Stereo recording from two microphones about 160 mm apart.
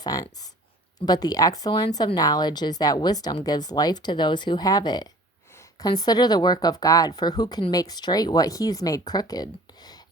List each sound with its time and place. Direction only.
0.0 s speech: 20° left (ahead or behind)